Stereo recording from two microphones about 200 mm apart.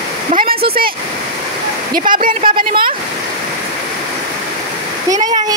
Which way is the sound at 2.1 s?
45° right (ahead or behind).